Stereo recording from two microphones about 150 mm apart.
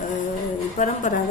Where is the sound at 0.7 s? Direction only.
55° left (ahead or behind).